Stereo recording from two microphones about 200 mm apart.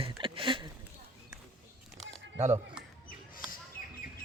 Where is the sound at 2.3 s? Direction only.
35° right (ahead or behind).